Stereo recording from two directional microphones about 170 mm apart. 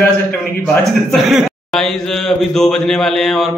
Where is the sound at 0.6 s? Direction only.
Centre (ahead or behind).